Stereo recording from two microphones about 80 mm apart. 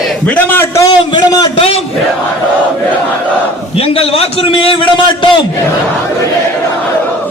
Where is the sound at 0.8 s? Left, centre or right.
Left.